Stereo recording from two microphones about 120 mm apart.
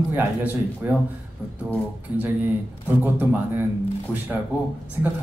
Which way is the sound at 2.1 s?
20° right (ahead or behind).